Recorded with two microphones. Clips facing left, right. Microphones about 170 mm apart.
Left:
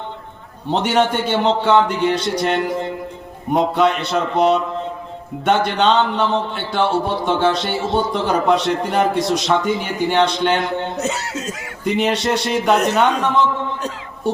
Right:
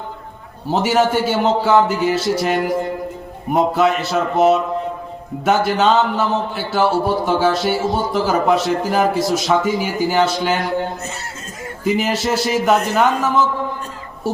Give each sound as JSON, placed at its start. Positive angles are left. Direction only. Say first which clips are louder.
{"t": 0.7, "sound": "speech", "louder": "right 1 dB", "side_deg": -5}
{"t": 11.0, "sound": "speech", "louder": "left 7 dB", "side_deg": 75}
{"t": 11.9, "sound": "speech", "louder": "even", "side_deg": 0}